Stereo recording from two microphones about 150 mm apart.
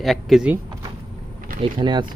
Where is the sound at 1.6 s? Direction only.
35° right (ahead or behind).